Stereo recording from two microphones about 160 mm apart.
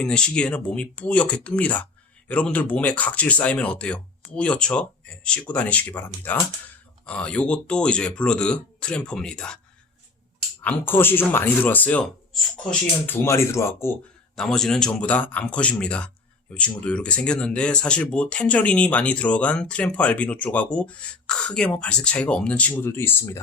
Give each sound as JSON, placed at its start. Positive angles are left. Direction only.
{"t": 0.0, "sound": "speech", "side_deg": 5}
{"t": 10.6, "sound": "speech", "side_deg": 10}
{"t": 14.3, "sound": "speech", "side_deg": 5}